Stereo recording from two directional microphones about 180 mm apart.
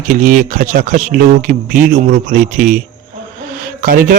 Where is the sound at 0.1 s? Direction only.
45° right (ahead or behind).